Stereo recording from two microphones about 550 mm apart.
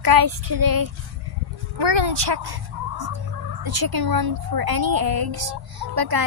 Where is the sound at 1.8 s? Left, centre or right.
Right.